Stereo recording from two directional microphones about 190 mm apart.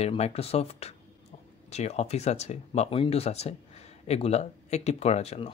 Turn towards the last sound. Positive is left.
turn(degrees=35)  # may be behind; listen again after turning